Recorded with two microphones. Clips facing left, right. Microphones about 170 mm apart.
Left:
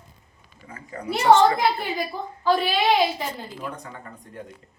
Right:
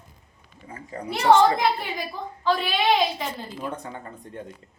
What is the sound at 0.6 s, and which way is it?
Speech, 30° right (ahead or behind).